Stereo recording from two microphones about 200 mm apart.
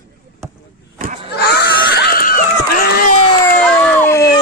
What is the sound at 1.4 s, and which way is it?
Screaming, 55° left (ahead or behind).